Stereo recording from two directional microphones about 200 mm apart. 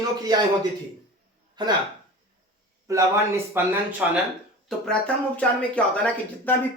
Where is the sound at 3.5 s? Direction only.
10° right (ahead or behind).